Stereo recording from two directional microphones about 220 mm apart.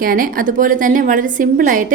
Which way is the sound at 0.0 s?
40° right (ahead or behind).